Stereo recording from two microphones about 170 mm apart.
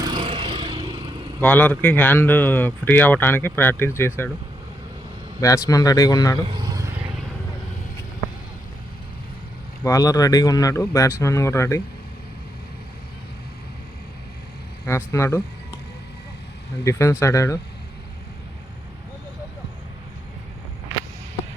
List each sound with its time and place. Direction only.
0.0 s vehicle: 30° right (ahead or behind)
1.4 s speech: 10° left (ahead or behind)
5.6 s speech: 20° left (ahead or behind)
6.4 s vehicle: 25° right (ahead or behind)
9.8 s speech: 20° left (ahead or behind)
14.8 s speech: 15° left (ahead or behind)
16.8 s speech: 15° left (ahead or behind)